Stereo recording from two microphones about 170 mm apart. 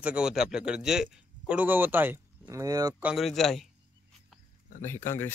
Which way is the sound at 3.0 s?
Centre (ahead or behind).